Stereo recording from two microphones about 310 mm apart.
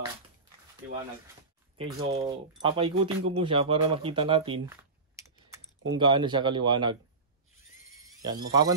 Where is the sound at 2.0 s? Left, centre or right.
Centre.